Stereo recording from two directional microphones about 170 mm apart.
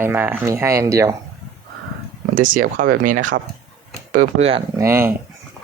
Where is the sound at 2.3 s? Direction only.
50° right (ahead or behind).